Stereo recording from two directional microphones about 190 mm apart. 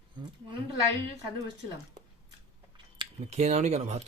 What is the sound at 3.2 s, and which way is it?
Speech, 35° right (ahead or behind).